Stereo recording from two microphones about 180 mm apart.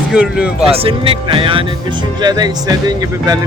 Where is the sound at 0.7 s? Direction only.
30° right (ahead or behind).